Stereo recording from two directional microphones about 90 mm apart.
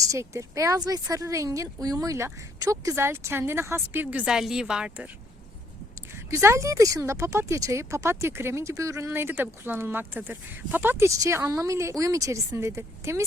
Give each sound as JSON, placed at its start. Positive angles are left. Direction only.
{"t": 0.0, "sound": "speech", "side_deg": -35}
{"t": 2.9, "sound": "speech", "side_deg": -25}
{"t": 4.3, "sound": "speech", "side_deg": -5}
{"t": 6.3, "sound": "speech", "side_deg": -35}